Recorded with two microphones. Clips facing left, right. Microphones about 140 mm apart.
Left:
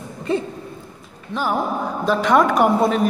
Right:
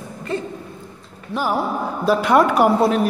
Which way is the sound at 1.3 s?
10° right (ahead or behind).